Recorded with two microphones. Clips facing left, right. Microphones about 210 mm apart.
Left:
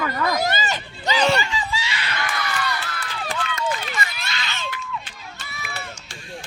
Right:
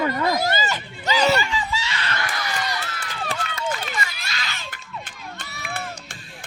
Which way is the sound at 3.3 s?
35° right (ahead or behind).